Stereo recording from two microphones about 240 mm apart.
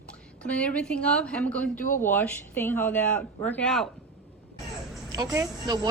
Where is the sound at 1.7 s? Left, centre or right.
Left.